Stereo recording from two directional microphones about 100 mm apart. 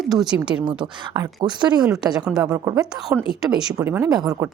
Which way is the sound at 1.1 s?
45° right (ahead or behind).